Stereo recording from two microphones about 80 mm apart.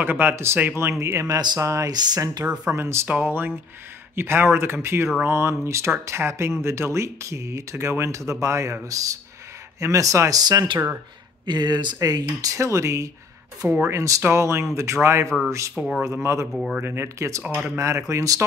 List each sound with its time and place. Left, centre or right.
0.0 s speech: right
1.9 s speech: right
2.4 s speech: centre
2.7 s speech: right
10.4 s speech: right
12.0 s speech: right
15.2 s speech: centre
16.0 s speech: right